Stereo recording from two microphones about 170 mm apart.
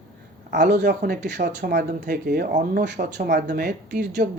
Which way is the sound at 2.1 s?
60° right (ahead or behind).